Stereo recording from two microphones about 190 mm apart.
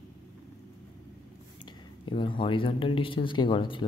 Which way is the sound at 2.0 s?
25° left (ahead or behind).